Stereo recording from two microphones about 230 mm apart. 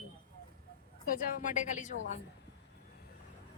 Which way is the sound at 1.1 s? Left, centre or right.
Left.